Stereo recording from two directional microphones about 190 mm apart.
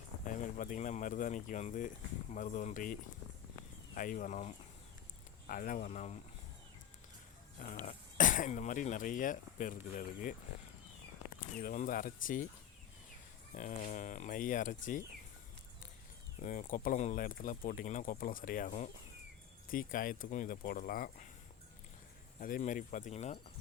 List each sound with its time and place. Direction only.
0.3 s speech: 45° left (ahead or behind)
7.6 s speech: 40° left (ahead or behind)
11.3 s speech: 45° left (ahead or behind)
13.5 s speech: 40° left (ahead or behind)
16.4 s speech: 40° left (ahead or behind)
19.7 s speech: 45° left (ahead or behind)
22.4 s speech: 45° left (ahead or behind)